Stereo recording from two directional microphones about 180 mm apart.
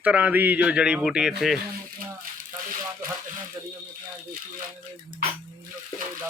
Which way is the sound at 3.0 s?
50° right (ahead or behind).